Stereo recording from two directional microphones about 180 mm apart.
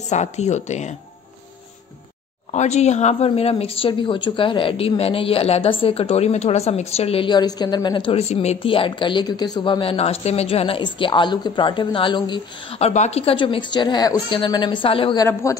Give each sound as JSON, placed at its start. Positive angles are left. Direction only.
{"t": 0.1, "sound": "a woman's voice", "side_deg": 40}
{"t": 2.5, "sound": "a woman's voice", "side_deg": 40}
{"t": 15.4, "sound": "speech", "side_deg": 15}